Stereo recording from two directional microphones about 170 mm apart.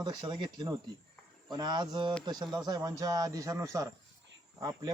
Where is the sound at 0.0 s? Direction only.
25° right (ahead or behind).